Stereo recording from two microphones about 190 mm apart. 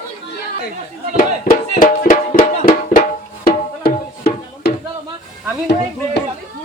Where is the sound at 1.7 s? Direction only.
40° left (ahead or behind); by 4.7 s 55° left (ahead or behind).